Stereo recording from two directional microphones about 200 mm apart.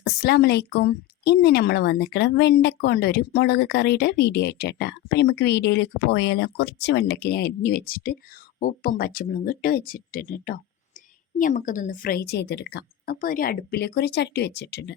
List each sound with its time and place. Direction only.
0.0 s a woman's voice: 55° left (ahead or behind)